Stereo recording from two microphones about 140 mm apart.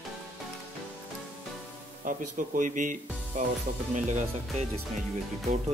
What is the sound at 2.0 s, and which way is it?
Speech, 70° right (ahead or behind).